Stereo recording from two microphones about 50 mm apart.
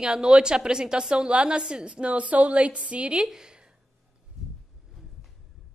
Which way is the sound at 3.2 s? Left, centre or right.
Centre.